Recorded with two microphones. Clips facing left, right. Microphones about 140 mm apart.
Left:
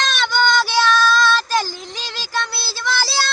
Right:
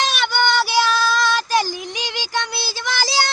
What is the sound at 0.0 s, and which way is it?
Child singing, 10° right (ahead or behind).